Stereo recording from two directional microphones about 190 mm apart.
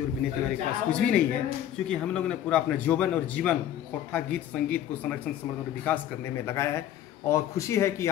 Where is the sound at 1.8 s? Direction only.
5° left (ahead or behind).